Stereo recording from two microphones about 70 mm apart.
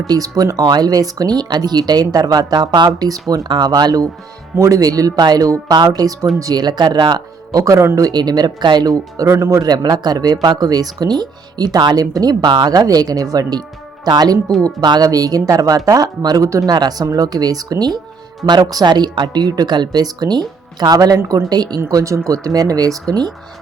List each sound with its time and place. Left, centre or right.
0.1 s speech: right
4.5 s speech: right
7.6 s speech: right
7.9 s speech: right
9.1 s speech: right
16.7 s speech: right
17.1 s speech: right
21.8 s speech: right
23.0 s speech: right